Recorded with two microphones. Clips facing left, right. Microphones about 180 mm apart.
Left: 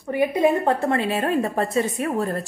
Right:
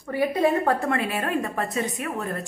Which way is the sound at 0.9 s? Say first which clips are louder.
Left 3 dB; 30° left (ahead or behind).